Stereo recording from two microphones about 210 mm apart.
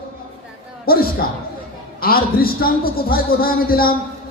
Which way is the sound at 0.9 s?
45° left (ahead or behind).